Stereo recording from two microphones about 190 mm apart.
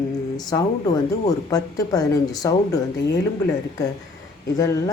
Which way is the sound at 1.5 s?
20° left (ahead or behind).